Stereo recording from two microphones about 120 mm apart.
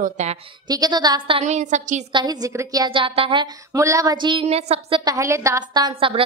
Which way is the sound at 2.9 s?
45° right (ahead or behind).